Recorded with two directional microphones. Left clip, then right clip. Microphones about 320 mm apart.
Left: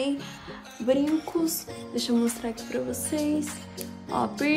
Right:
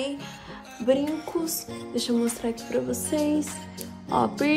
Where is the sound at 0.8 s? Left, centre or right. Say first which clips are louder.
Even; centre.